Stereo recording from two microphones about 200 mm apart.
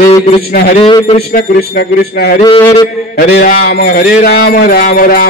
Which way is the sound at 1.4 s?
50° left (ahead or behind).